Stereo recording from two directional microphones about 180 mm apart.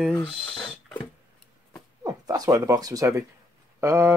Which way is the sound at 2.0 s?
20° right (ahead or behind).